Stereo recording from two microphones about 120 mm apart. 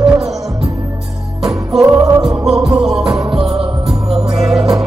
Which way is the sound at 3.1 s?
40° right (ahead or behind).